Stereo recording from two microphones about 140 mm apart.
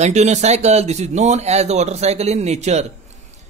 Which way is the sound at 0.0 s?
55° right (ahead or behind).